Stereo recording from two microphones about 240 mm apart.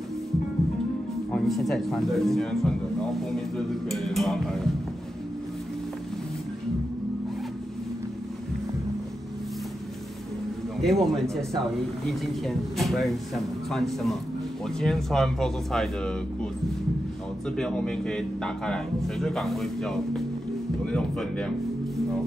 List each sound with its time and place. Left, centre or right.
1.3 s speech: centre
10.8 s speech: centre
17.6 s speech: centre